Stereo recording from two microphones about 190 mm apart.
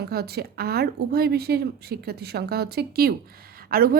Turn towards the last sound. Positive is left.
turn(degrees=-50)  # may be behind; listen again after turning